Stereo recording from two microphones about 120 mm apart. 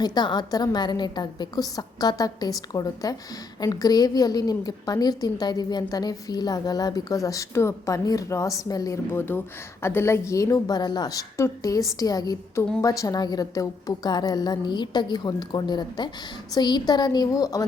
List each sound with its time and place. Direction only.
0.0 s a woman's voice: 35° left (ahead or behind)
9.1 s a woman's voice: 20° left (ahead or behind)